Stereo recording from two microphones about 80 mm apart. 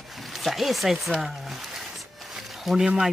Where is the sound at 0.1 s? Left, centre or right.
Centre.